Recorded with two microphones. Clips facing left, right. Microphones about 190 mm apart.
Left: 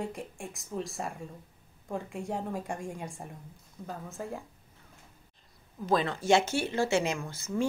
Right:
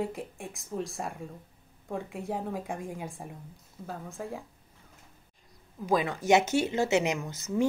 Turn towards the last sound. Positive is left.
turn(degrees=-20)  # may be behind; listen again after turning